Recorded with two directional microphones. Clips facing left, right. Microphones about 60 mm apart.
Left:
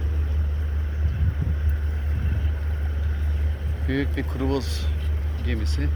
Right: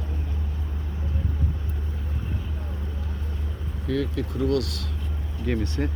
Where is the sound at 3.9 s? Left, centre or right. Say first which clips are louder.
Even; left.